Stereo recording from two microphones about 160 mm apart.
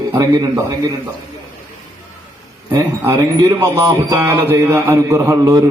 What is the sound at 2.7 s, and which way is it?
A man's voice, 20° right (ahead or behind).